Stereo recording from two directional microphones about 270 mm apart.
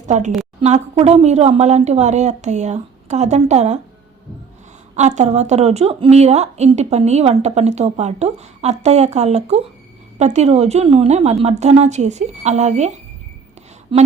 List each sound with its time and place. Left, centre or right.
0.1 s speech: right
4.9 s speech: right
13.9 s speech: centre